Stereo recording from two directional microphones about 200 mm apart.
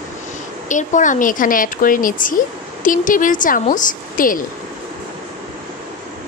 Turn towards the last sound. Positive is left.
turn(degrees=45)  # may be behind; listen again after turning